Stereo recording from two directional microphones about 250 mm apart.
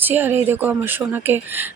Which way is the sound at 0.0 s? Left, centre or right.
Centre.